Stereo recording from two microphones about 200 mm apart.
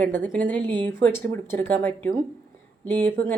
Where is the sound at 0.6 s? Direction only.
20° right (ahead or behind).